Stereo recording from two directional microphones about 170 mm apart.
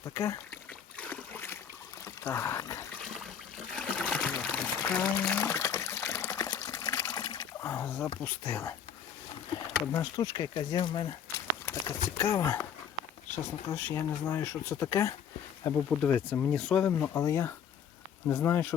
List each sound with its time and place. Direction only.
0.0 s speech: 20° left (ahead or behind)
0.9 s a sound: 10° left (ahead or behind)
2.0 s speech: 15° left (ahead or behind)
3.8 s trickle: 5° left (ahead or behind)
4.5 s water: 10° left (ahead or behind)
8.2 s speech: 15° left (ahead or behind)
9.8 s speech: 15° left (ahead or behind)
11.6 s speech: 15° left (ahead or behind)